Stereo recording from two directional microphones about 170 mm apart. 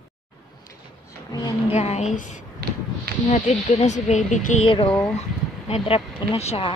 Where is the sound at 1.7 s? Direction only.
40° left (ahead or behind).